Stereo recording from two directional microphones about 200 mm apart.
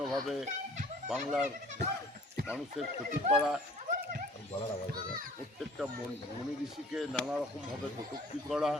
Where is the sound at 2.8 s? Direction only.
Centre (ahead or behind).